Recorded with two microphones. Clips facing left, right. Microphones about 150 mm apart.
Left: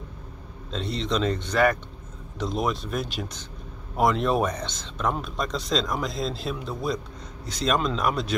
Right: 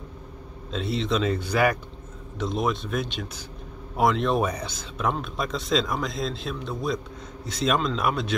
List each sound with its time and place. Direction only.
0.7 s a man's voice: 5° right (ahead or behind)